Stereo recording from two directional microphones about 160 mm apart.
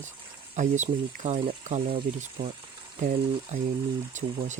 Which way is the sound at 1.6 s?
40° right (ahead or behind).